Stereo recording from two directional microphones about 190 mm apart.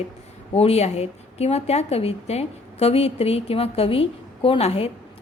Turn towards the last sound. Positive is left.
turn(degrees=30)  # may be behind; listen again after turning